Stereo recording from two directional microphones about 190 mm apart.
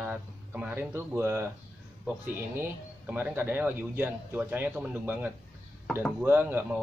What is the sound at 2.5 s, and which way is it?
A man's voice, 10° right (ahead or behind).